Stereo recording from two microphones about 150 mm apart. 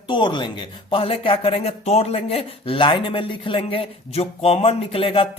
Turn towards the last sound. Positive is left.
turn(degrees=40)  # may be behind; listen again after turning